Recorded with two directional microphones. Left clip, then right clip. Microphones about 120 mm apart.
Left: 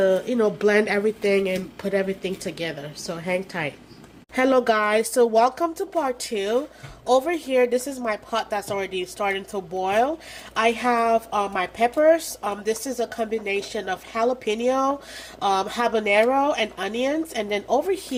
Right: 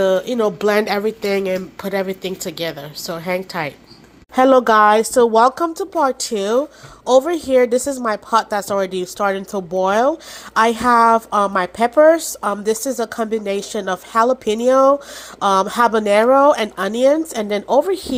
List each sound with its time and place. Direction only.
0.0 s a woman's voice: 25° right (ahead or behind); by 17.7 s 45° right (ahead or behind)
17.8 s speech: 35° right (ahead or behind)